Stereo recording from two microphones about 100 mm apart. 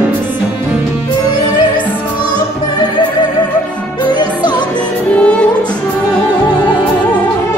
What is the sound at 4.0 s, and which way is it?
Music, 45° left (ahead or behind).